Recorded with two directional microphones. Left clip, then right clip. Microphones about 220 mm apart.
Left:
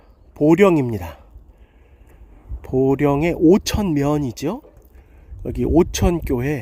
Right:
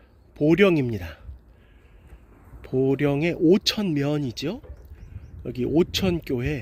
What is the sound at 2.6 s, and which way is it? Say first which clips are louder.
Speech: left 5 dB; 25° left (ahead or behind).